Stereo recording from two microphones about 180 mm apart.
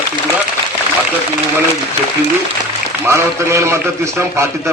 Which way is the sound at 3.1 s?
15° right (ahead or behind).